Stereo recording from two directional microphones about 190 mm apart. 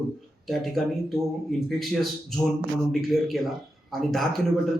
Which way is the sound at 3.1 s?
Centre (ahead or behind).